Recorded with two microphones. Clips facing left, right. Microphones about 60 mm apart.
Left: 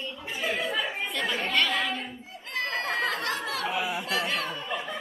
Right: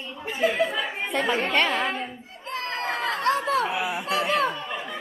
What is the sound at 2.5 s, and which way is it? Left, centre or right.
Chatter, right.